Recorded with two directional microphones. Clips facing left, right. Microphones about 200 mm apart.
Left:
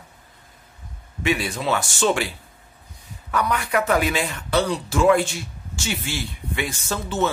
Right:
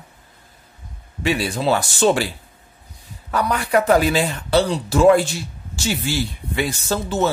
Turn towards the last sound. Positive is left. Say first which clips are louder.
# right 3 dB
turn(degrees=-35)  # may be behind; listen again after turning